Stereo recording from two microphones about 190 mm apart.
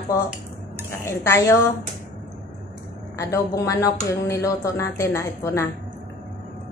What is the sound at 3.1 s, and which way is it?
Speech, 15° left (ahead or behind).